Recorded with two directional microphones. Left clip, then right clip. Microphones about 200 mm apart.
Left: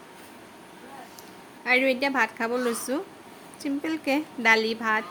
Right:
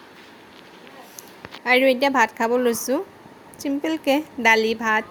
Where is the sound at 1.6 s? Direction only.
25° right (ahead or behind).